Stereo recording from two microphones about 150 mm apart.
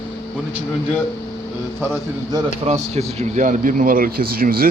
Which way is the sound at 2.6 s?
45° right (ahead or behind).